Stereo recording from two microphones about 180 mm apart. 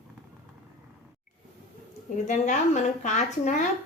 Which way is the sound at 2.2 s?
40° left (ahead or behind).